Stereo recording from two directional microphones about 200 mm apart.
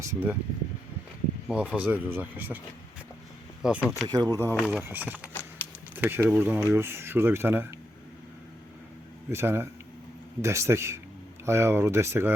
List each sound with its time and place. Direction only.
0.0 s speech: 15° right (ahead or behind)
1.5 s speech: 5° right (ahead or behind)
3.6 s speech: 5° right (ahead or behind)
4.0 s speech: 20° right (ahead or behind)
4.5 s speech: centre (ahead or behind)
9.3 s speech: 10° right (ahead or behind)